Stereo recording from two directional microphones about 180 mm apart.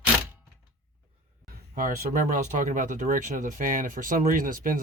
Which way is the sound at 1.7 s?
50° right (ahead or behind).